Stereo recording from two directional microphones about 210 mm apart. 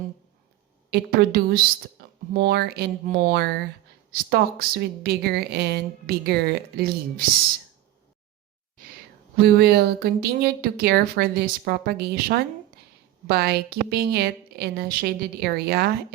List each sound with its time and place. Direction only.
0.9 s speech: 50° right (ahead or behind)
2.0 s a sound: 50° right (ahead or behind)
2.3 s speech: 50° right (ahead or behind)
9.4 s speech: 50° right (ahead or behind)